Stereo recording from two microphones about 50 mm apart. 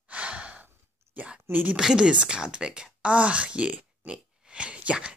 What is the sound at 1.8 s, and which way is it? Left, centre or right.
Speech, centre.